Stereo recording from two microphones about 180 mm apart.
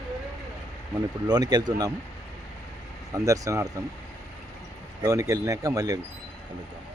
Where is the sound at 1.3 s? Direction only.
20° right (ahead or behind).